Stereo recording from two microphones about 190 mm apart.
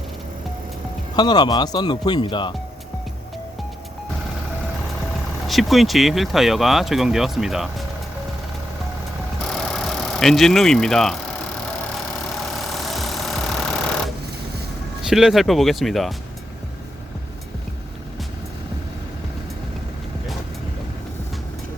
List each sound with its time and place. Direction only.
1.1 s speech: 20° left (ahead or behind)
5.5 s speech: centre (ahead or behind)
9.5 s vehicle: 5° left (ahead or behind)
12.5 s vehicle: centre (ahead or behind)
15.0 s speech: centre (ahead or behind)